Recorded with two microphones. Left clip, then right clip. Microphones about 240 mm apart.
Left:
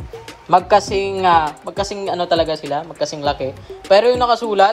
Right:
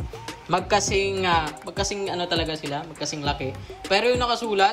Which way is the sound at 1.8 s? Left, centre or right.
Centre.